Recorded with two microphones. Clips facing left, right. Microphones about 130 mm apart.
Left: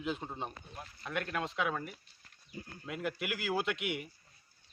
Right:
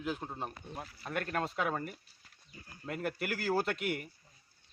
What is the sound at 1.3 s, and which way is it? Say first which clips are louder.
Speech: right 3 dB; 45° right (ahead or behind).